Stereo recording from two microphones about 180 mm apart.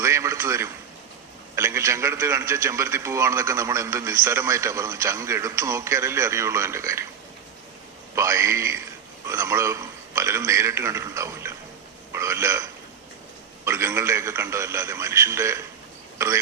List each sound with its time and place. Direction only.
0.0 s a sound: 15° right (ahead or behind)
1.5 s a man's voice: 15° right (ahead or behind)
8.1 s a man's voice: 15° right (ahead or behind)
13.7 s a man's voice: 15° right (ahead or behind)